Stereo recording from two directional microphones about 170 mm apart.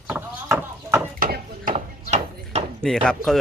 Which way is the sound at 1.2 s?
55° right (ahead or behind).